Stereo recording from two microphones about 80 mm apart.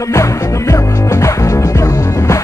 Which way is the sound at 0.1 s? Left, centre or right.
Left.